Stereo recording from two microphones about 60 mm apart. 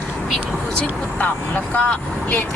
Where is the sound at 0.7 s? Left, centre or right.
Left.